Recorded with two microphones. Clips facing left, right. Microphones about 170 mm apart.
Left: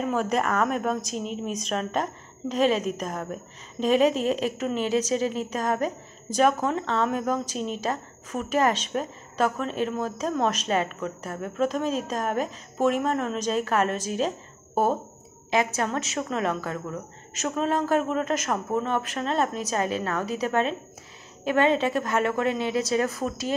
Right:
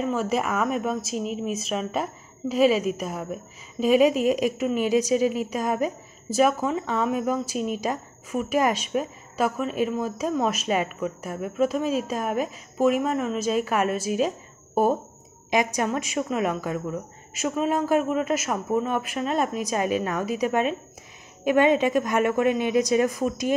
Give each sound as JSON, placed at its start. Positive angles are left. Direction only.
{"t": 0.0, "sound": "a woman's voice", "side_deg": 0}
{"t": 15.5, "sound": "a woman's voice", "side_deg": -15}